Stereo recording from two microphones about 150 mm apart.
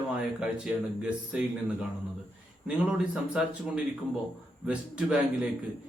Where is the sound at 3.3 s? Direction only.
5° right (ahead or behind).